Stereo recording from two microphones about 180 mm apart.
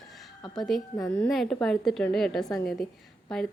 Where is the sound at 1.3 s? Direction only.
Centre (ahead or behind).